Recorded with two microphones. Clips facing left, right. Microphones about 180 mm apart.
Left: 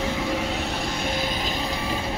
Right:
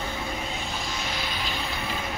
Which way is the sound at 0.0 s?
70° left (ahead or behind).